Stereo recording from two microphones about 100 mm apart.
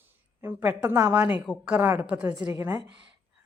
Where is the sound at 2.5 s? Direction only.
30° right (ahead or behind).